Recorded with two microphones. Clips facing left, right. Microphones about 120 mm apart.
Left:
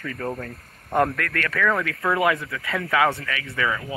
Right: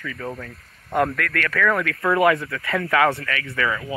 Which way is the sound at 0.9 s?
25° left (ahead or behind).